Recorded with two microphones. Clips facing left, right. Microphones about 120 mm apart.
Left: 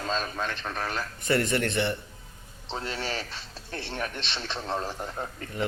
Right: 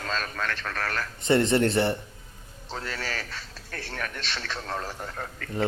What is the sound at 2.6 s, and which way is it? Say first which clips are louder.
A man's voice: left 1 dB; 25° left (ahead or behind).